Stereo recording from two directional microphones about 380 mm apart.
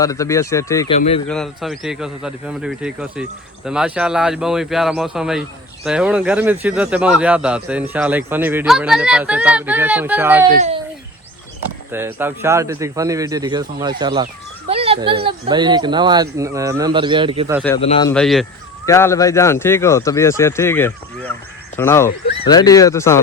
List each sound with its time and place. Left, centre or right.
0.0 s speech: centre
1.3 s a man's voice: centre
11.9 s speech: centre
17.7 s speech: centre
18.1 s a man's voice: centre